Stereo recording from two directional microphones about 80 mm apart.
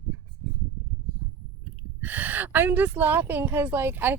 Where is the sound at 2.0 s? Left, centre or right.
Right.